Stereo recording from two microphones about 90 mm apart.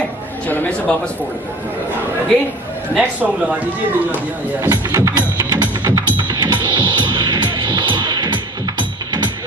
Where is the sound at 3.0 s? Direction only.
15° right (ahead or behind).